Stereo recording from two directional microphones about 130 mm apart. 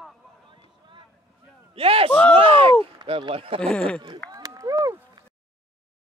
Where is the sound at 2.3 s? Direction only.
45° right (ahead or behind).